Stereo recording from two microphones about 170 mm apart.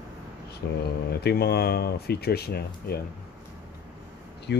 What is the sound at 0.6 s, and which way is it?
Speech, 70° left (ahead or behind).